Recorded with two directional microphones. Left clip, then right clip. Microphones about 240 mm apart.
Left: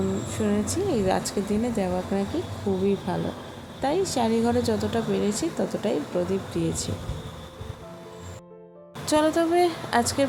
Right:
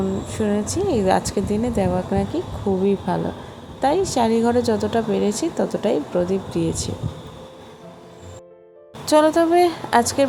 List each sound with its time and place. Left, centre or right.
0.3 s a woman's voice: centre
9.0 s a woman's voice: centre